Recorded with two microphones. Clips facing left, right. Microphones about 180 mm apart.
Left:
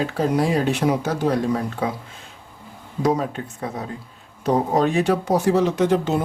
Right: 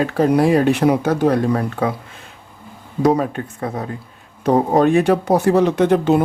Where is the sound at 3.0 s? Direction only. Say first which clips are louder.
Right 5 dB; 60° right (ahead or behind).